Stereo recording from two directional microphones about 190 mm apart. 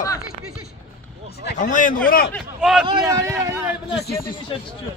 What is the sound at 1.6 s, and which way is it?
Speech, 45° left (ahead or behind).